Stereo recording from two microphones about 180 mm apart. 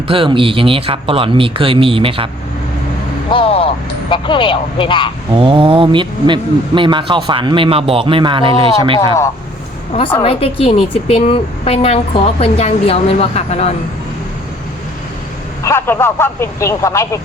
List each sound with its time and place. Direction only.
0.1 s speech: 30° right (ahead or behind)
3.3 s vehicle: 30° left (ahead or behind)
4.1 s speech: 25° left (ahead or behind)
5.3 s speech: 30° right (ahead or behind)
10.2 s speech: 30° left (ahead or behind)
15.6 s speech: 15° left (ahead or behind)